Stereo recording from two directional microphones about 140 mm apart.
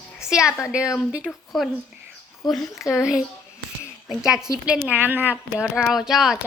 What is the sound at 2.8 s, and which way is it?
Speech, 20° left (ahead or behind).